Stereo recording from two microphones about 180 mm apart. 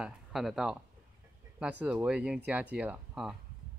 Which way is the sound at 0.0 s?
Centre (ahead or behind).